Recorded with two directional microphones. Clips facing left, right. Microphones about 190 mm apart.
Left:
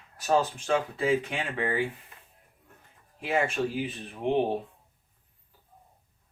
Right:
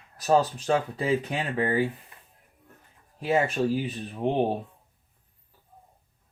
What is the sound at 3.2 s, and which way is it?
Speech, 35° right (ahead or behind).